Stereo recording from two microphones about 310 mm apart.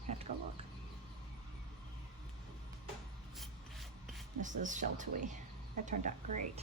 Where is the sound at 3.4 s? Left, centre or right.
Centre.